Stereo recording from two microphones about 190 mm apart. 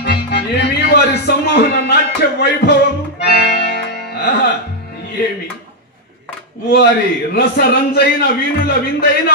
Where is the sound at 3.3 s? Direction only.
55° left (ahead or behind).